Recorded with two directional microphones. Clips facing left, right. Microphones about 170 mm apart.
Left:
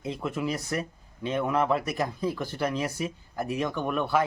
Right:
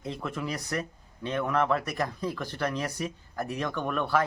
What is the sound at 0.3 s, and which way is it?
Speech, 5° left (ahead or behind).